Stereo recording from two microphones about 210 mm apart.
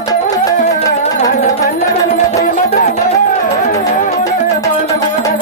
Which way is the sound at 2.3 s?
45° left (ahead or behind).